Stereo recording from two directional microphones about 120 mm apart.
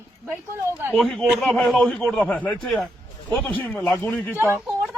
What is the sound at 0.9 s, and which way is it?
A man's voice, centre (ahead or behind).